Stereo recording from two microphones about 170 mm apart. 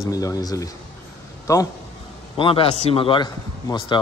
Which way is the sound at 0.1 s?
20° left (ahead or behind).